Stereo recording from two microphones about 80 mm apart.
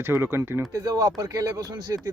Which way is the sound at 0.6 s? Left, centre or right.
Right.